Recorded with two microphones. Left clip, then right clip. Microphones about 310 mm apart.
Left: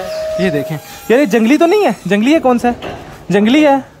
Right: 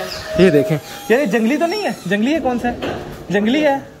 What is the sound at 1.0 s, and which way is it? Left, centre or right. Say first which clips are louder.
A woman's voice: left 5 dB; centre.